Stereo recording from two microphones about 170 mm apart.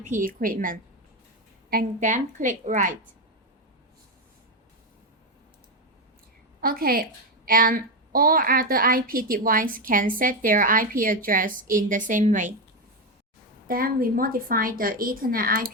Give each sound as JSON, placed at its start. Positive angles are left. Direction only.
{"t": 0.0, "sound": "a woman's voice", "side_deg": -50}
{"t": 6.6, "sound": "a child's voice", "side_deg": -60}
{"t": 13.7, "sound": "a child's voice", "side_deg": -55}